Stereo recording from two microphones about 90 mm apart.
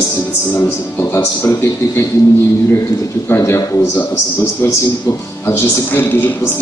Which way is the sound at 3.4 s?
40° left (ahead or behind).